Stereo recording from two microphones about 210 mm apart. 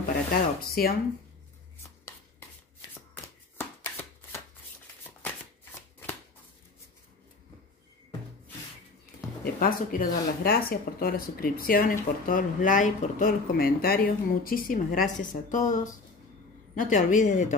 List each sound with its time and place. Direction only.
0.6 s speech: 45° left (ahead or behind)
3.5 s shuffling cards: 10° left (ahead or behind)
9.4 s speech: 45° left (ahead or behind)